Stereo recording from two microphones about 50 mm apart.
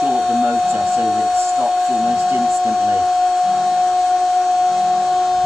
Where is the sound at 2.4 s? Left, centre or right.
Centre.